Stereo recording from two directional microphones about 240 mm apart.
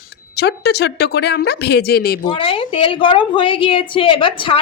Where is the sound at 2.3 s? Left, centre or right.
Left.